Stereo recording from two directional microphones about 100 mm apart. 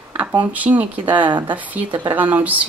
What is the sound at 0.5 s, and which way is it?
Speech, 15° right (ahead or behind).